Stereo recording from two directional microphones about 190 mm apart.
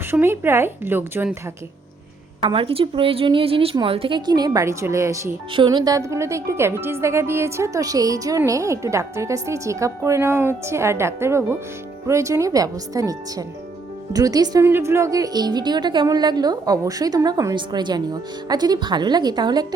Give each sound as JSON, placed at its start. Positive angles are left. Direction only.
{"t": 0.1, "sound": "speech", "side_deg": -10}
{"t": 2.4, "sound": "speech", "side_deg": -30}
{"t": 5.5, "sound": "speech", "side_deg": -25}